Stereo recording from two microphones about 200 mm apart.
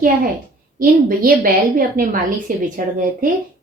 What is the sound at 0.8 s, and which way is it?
A woman's voice, 45° right (ahead or behind).